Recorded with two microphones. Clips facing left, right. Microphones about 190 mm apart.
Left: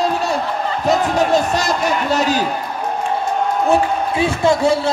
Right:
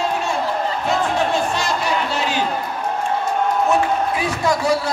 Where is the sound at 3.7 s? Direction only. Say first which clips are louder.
Left 2 dB; 25° left (ahead or behind).